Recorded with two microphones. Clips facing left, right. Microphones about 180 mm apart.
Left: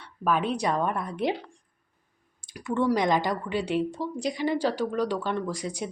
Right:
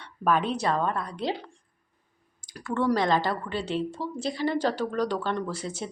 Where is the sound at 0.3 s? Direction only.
10° left (ahead or behind).